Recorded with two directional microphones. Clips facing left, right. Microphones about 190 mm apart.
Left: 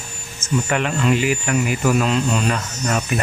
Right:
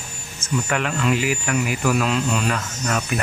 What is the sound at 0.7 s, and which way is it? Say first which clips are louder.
Speech: left 2 dB; centre (ahead or behind).